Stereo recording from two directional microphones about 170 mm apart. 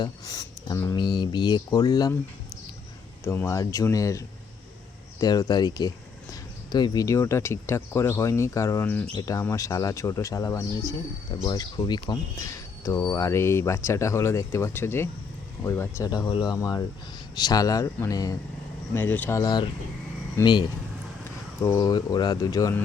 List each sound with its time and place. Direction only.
0.0 s speech: 20° left (ahead or behind)
3.2 s speech: 15° left (ahead or behind)
5.2 s speech: 20° left (ahead or behind)